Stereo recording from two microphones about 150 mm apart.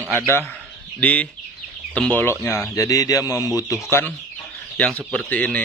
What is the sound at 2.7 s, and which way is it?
Speech, 20° left (ahead or behind).